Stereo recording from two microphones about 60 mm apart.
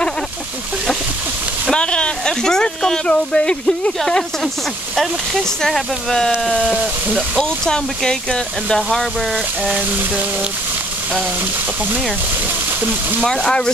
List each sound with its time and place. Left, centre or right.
1.7 s speech: centre
4.9 s speech: centre
9.8 s a sound: right
13.2 s speech: centre